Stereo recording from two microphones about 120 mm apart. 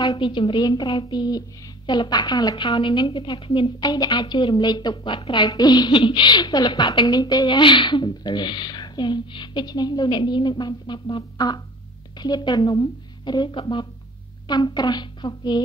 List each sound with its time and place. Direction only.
0.2 s a woman's voice: 45° left (ahead or behind)